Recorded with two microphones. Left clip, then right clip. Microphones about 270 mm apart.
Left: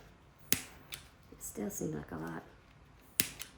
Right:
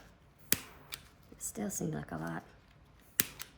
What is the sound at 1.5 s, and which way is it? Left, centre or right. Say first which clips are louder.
Speech: even; right.